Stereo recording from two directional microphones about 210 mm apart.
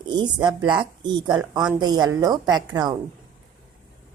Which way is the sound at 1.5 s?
5° right (ahead or behind).